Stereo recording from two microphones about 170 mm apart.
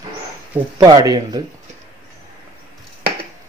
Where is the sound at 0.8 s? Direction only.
20° right (ahead or behind).